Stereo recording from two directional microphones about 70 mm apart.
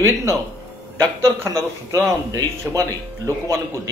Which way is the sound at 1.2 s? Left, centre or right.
Right.